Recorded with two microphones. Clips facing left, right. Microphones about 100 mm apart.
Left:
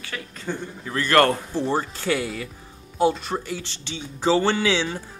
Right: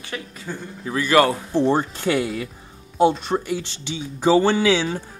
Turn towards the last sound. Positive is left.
turn(degrees=-10)  # may be behind; listen again after turning